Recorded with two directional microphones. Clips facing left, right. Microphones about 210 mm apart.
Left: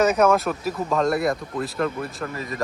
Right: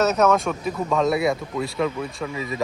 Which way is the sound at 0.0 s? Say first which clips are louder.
Left 1 dB; 10° left (ahead or behind).